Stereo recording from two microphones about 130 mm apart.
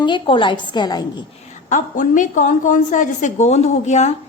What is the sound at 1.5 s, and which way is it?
A woman's voice, 70° left (ahead or behind).